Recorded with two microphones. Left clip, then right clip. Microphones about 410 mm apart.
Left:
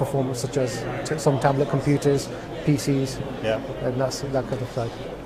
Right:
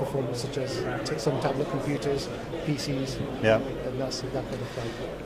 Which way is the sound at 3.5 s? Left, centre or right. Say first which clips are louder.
Right 3 dB; right.